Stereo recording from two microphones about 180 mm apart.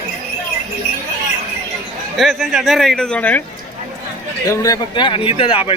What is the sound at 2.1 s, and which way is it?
Speech, centre (ahead or behind).